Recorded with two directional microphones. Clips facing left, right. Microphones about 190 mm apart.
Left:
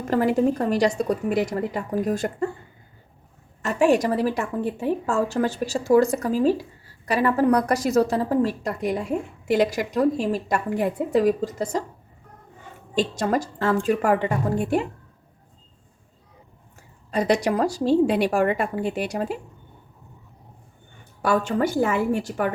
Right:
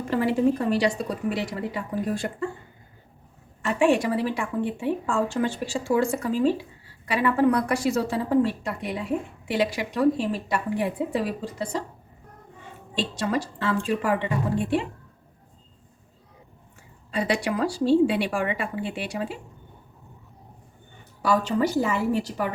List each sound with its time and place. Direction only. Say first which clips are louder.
0.1 s a woman's voice: left 2 dB; 45° left (ahead or behind)
3.6 s a woman's voice: left 2 dB; 40° left (ahead or behind)
12.9 s a woman's voice: left 4 dB; 45° left (ahead or behind)
17.1 s a woman's voice: left 4 dB; 40° left (ahead or behind)
21.2 s a woman's voice: left 1 dB; 50° left (ahead or behind)